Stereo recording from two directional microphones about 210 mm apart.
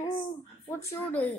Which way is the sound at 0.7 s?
10° left (ahead or behind).